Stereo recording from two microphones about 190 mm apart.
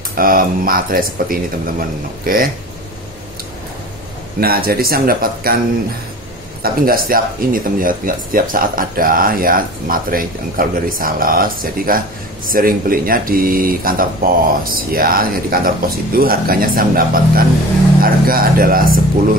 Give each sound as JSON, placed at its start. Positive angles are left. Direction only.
{"t": 0.1, "sound": "speech", "side_deg": -50}
{"t": 4.4, "sound": "speech", "side_deg": -50}
{"t": 6.6, "sound": "speech", "side_deg": -50}